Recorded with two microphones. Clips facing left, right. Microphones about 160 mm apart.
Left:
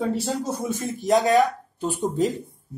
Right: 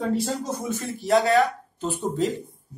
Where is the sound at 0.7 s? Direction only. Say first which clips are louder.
Even; 15° left (ahead or behind).